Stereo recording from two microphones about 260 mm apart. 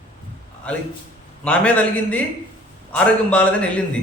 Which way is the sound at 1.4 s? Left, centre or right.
Centre.